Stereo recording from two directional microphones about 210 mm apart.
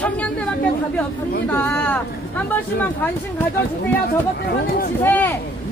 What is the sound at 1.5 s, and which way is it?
Speech, 10° left (ahead or behind).